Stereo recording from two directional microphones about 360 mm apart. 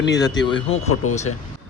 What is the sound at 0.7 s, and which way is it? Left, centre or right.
Speech, left.